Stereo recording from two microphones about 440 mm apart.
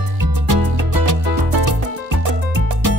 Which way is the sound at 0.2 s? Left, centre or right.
Right.